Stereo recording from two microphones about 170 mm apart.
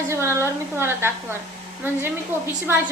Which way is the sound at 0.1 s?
15° right (ahead or behind).